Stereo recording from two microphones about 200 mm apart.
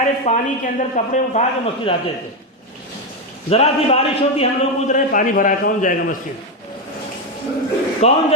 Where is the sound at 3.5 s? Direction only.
30° left (ahead or behind).